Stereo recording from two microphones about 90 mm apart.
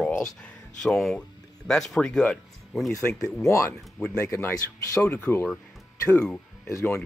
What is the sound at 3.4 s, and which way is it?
Speech, 35° left (ahead or behind).